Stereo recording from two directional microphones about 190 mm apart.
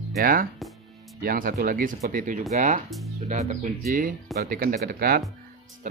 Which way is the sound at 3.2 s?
35° right (ahead or behind).